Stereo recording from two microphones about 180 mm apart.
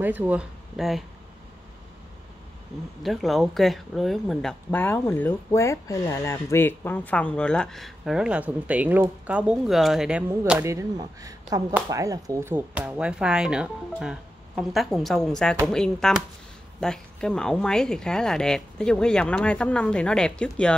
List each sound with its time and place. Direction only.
0.0 s speech: 10° right (ahead or behind)
3.0 s speech: centre (ahead or behind)